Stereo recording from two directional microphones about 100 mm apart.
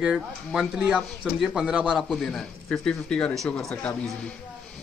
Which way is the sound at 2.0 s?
Centre (ahead or behind).